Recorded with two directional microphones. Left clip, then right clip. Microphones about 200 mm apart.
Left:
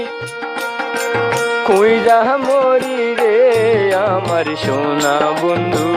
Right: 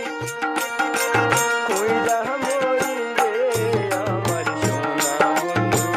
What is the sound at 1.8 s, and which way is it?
Music, 45° left (ahead or behind).